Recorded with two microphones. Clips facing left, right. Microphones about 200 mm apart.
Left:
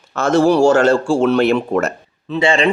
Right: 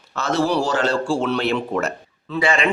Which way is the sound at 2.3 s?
25° left (ahead or behind).